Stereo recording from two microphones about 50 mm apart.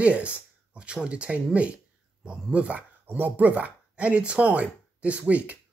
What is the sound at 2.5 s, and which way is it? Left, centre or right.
Speech, right.